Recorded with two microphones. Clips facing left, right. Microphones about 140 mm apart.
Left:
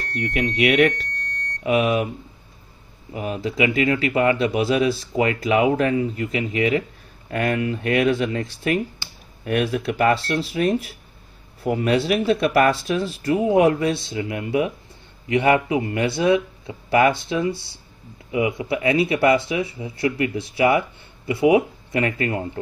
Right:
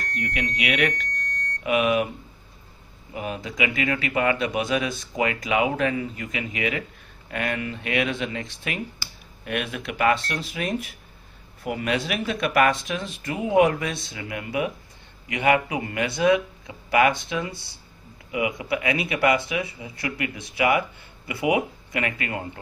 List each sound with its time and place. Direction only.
0.6 s speech: 45° left (ahead or behind)
3.2 s speech: 30° left (ahead or behind)